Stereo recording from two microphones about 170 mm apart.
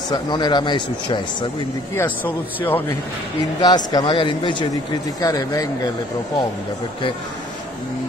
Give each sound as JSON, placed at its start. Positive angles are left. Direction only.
{"t": 0.1, "sound": "speech", "side_deg": 25}
{"t": 2.0, "sound": "a man's voice", "side_deg": 10}
{"t": 3.6, "sound": "speech", "side_deg": 25}